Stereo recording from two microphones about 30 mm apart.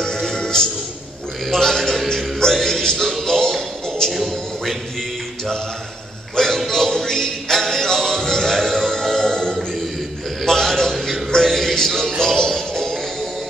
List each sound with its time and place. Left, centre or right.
0.0 s music: centre
1.4 s a man's voice: centre
2.5 s music: centre
4.0 s a man's voice: centre
6.3 s music: centre
10.4 s a sound: centre
11.4 s music: centre